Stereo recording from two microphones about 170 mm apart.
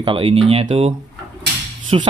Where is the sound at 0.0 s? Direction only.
30° right (ahead or behind).